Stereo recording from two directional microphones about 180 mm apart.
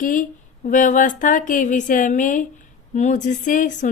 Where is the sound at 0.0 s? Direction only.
45° left (ahead or behind).